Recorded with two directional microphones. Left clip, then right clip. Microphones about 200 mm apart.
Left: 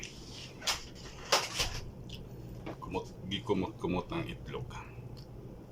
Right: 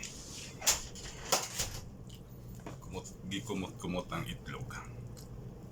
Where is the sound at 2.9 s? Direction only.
15° left (ahead or behind).